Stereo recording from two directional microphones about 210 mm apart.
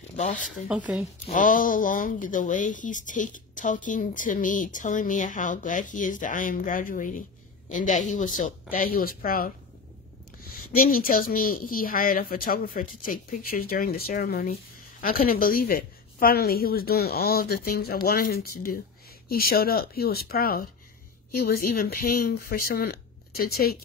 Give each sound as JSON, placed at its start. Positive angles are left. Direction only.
{"t": 0.2, "sound": "speech", "side_deg": 35}
{"t": 0.5, "sound": "speech", "side_deg": -5}
{"t": 1.3, "sound": "speech", "side_deg": 40}
{"t": 10.7, "sound": "a woman's voice", "side_deg": 45}